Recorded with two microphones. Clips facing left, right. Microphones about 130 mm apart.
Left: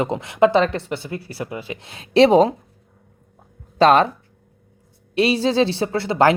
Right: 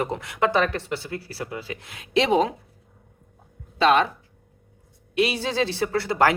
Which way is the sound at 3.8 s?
40° left (ahead or behind).